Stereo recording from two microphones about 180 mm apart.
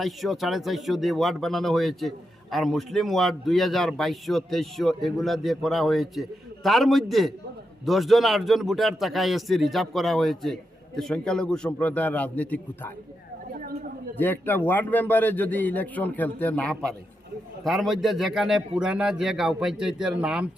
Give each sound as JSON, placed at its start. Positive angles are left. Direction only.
{"t": 0.0, "sound": "speech", "side_deg": 0}
{"t": 13.5, "sound": "chatter", "side_deg": -55}
{"t": 14.2, "sound": "a man's voice", "side_deg": 10}